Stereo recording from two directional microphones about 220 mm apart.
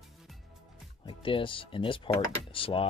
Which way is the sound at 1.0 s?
25° left (ahead or behind).